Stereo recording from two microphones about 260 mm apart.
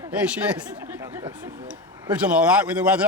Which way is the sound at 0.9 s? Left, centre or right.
Centre.